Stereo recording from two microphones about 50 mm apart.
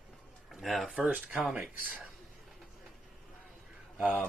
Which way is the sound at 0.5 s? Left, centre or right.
Centre.